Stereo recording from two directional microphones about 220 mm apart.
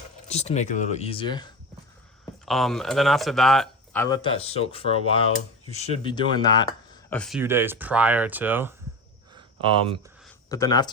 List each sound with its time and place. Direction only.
0.3 s speech: 30° left (ahead or behind)
2.5 s speech: centre (ahead or behind); by 7.0 s 20° left (ahead or behind)
7.1 s speech: centre (ahead or behind)
9.3 s a sound: 25° right (ahead or behind)
10.5 s speech: 15° left (ahead or behind)